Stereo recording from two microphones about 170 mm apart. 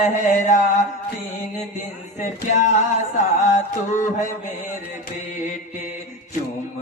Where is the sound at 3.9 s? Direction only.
45° left (ahead or behind).